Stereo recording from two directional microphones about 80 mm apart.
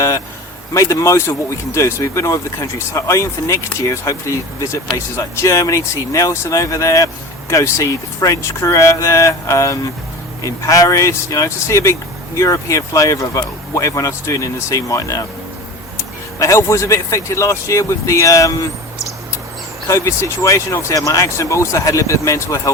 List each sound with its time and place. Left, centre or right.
0.7 s speech: left
19.9 s speech: left